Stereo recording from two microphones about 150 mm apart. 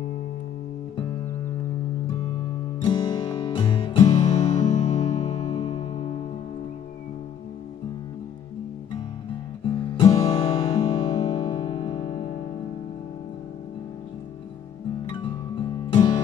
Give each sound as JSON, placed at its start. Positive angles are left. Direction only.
{"t": 2.8, "sound": "music", "side_deg": 30}
{"t": 9.9, "sound": "music", "side_deg": 35}
{"t": 15.1, "sound": "music", "side_deg": 35}